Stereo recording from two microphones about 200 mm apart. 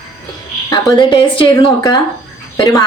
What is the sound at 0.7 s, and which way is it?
A woman's voice, 25° left (ahead or behind).